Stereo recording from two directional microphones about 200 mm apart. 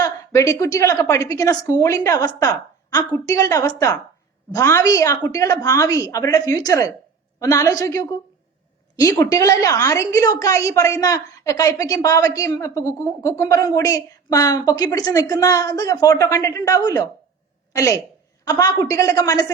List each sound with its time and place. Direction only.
0.0 s a woman's voice: 15° left (ahead or behind)